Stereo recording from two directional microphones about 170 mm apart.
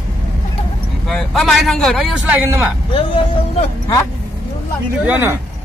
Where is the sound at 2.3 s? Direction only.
10° right (ahead or behind).